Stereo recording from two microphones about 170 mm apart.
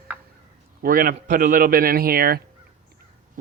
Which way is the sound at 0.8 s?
55° right (ahead or behind).